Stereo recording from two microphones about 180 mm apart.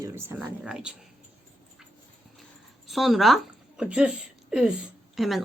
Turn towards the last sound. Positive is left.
turn(degrees=0)  # may be behind; listen again after turning